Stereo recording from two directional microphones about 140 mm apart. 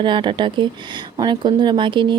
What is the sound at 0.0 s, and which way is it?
Speech, 35° right (ahead or behind).